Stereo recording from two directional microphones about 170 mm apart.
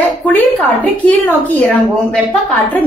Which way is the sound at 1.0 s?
10° left (ahead or behind).